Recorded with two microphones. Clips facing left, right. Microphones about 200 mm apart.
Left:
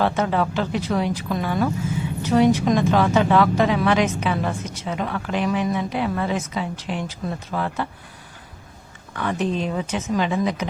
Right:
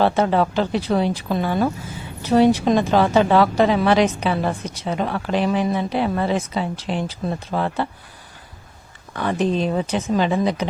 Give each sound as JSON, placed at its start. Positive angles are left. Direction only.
{"t": 0.0, "sound": "speech", "side_deg": -35}
{"t": 9.1, "sound": "speech", "side_deg": -35}